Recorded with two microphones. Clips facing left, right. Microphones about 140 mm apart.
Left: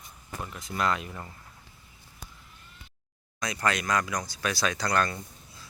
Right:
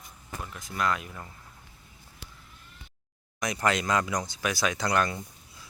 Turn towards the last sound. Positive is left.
turn(degrees=-15)  # may be behind; listen again after turning